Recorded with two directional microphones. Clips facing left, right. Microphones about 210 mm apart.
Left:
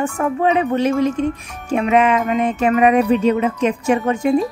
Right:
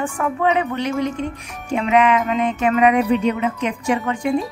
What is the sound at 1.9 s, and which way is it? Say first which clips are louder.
Speech: even; 25° left (ahead or behind).